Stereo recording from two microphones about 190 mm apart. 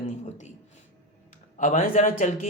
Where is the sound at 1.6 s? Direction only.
45° left (ahead or behind).